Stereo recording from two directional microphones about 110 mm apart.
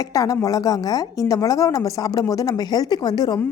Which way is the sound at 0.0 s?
30° left (ahead or behind).